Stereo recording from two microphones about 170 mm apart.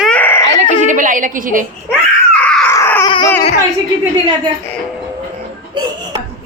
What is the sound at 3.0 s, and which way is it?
Baby cry, 25° left (ahead or behind).